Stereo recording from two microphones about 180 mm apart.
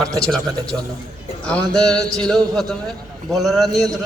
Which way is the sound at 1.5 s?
5° left (ahead or behind).